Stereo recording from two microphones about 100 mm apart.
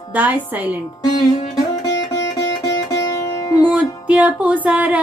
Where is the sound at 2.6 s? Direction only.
35° left (ahead or behind).